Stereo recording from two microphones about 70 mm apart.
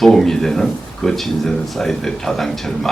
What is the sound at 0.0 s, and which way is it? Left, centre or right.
Speech, centre.